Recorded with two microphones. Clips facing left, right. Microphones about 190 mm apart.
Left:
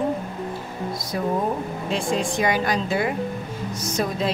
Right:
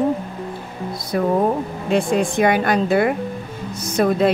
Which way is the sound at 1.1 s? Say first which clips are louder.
Right 6 dB; 55° right (ahead or behind).